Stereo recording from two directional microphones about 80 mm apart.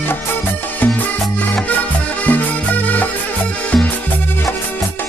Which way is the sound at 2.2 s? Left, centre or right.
Centre.